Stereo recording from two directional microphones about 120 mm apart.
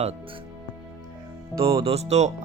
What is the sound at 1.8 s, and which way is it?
Speech, 60° right (ahead or behind).